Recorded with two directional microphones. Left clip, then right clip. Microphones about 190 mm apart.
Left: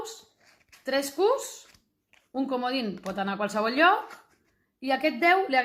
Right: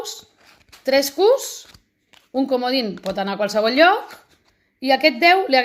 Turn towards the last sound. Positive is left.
turn(degrees=-35)  # may be behind; listen again after turning